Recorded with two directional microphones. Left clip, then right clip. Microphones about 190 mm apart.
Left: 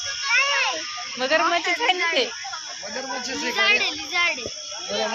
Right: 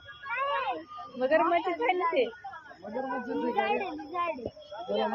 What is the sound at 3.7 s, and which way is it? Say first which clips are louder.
Speech: left 11 dB; 40° right (ahead or behind).